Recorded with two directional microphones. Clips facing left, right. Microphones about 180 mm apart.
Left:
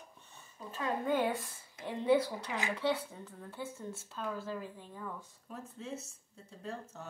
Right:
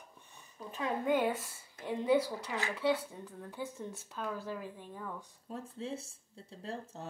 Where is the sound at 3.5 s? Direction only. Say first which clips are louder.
Right 1 dB; 15° right (ahead or behind).